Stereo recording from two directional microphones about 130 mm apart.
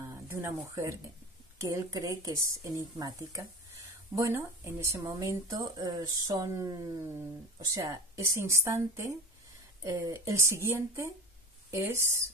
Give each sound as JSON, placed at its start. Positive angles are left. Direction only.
{"t": 0.0, "sound": "speech", "side_deg": -20}